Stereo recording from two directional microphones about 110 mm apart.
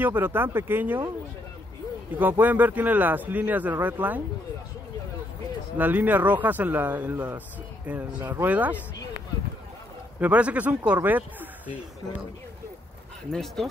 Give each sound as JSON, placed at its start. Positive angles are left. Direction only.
{"t": 0.0, "sound": "speech", "side_deg": -20}
{"t": 2.1, "sound": "speech", "side_deg": -15}
{"t": 5.8, "sound": "speech", "side_deg": -15}
{"t": 10.2, "sound": "speech", "side_deg": -15}
{"t": 13.3, "sound": "speech", "side_deg": 5}